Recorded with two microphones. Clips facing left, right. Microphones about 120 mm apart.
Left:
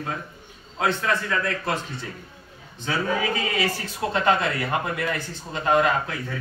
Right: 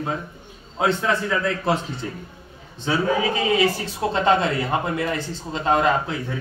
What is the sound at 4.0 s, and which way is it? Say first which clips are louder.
A man's voice: right 2 dB; 25° right (ahead or behind).